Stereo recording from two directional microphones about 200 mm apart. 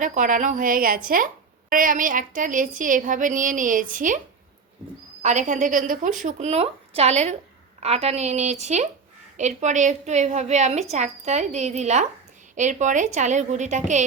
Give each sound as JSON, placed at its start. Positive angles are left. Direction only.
{"t": 0.0, "sound": "a woman's voice", "side_deg": -40}
{"t": 5.2, "sound": "a woman's voice", "side_deg": -35}